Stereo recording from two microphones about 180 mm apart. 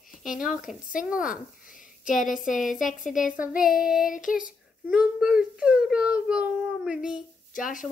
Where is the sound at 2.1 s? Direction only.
45° left (ahead or behind).